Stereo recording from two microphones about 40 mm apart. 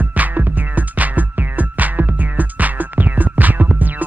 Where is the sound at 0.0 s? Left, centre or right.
Right.